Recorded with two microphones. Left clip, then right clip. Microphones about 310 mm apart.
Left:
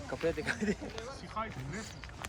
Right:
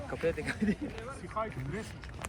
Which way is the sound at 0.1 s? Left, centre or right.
Left.